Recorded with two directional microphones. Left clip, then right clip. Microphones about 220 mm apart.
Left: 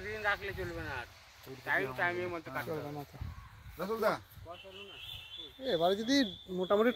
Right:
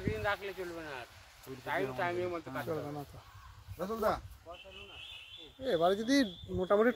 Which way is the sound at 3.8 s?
35° left (ahead or behind).